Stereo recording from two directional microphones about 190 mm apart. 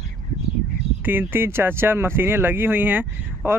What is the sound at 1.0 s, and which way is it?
Speech, 10° right (ahead or behind).